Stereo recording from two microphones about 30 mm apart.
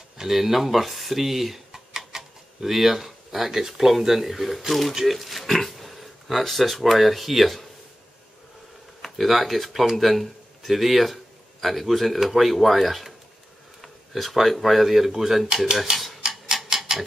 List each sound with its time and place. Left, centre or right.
0.3 s speech: centre
1.7 s a sound: centre
3.1 s speech: centre
9.0 s speech: centre
16.2 s tick-tock: centre